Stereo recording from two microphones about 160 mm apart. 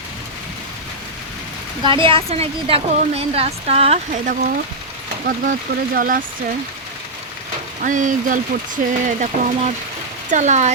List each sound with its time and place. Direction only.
1.8 s a woman's voice: 30° right (ahead or behind); by 4.5 s 55° right (ahead or behind)
5.2 s speech: 65° right (ahead or behind)
7.8 s speech: 55° right (ahead or behind)